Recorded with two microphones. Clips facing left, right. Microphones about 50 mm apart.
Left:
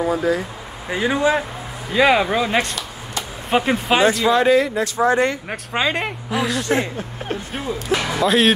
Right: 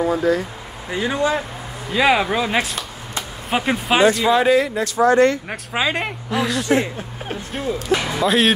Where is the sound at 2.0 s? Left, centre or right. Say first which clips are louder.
Left 1 dB; centre.